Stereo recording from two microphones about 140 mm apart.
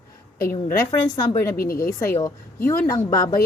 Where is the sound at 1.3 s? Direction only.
20° left (ahead or behind).